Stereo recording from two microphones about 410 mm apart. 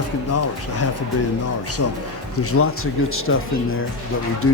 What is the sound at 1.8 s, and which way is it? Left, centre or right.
Speech, left.